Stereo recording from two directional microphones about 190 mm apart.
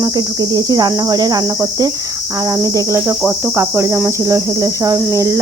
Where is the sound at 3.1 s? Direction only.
10° right (ahead or behind).